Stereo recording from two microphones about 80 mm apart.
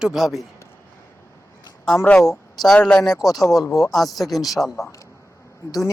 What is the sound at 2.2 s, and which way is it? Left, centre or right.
Speech, centre.